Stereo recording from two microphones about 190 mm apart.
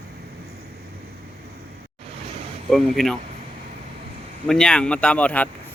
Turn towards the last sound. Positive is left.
turn(degrees=5)  # may be behind; listen again after turning